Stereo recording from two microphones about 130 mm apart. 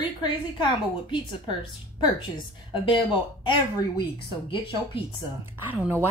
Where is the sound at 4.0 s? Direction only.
40° left (ahead or behind).